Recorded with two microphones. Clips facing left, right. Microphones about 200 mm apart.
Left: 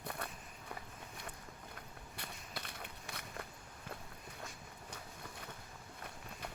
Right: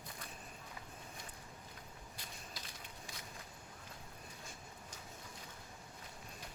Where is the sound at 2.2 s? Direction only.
60° left (ahead or behind).